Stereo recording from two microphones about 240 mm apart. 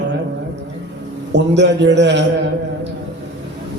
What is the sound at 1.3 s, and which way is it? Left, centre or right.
Speech, right.